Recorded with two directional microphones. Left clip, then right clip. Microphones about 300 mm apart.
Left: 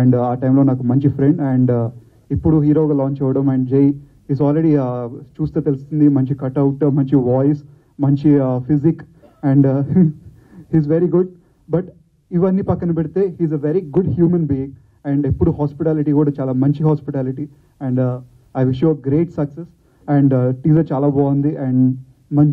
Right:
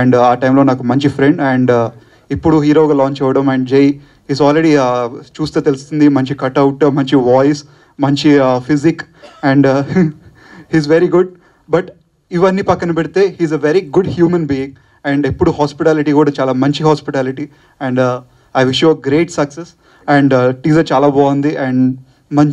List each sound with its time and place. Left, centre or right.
0.0 s speech: centre
2.8 s speech: right
3.1 s speech: centre
7.4 s speech: centre
21.0 s speech: right
21.3 s speech: centre